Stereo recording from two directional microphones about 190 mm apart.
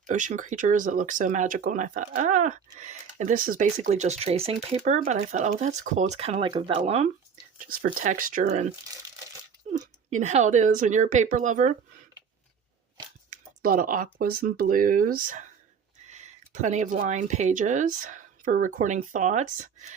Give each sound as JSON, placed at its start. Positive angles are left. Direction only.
{"t": 0.1, "sound": "speech", "side_deg": -40}
{"t": 7.6, "sound": "speech", "side_deg": -50}
{"t": 13.3, "sound": "speech", "side_deg": -50}